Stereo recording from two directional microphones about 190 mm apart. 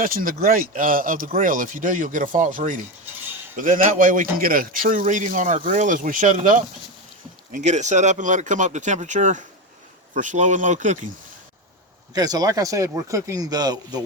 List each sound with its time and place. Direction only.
0.0 s a man's voice: 50° right (ahead or behind)
12.1 s speech: 20° right (ahead or behind)